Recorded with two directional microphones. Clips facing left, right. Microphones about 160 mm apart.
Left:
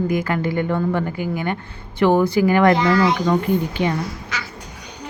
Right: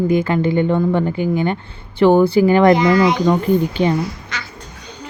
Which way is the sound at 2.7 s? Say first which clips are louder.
Right 4 dB; 15° right (ahead or behind).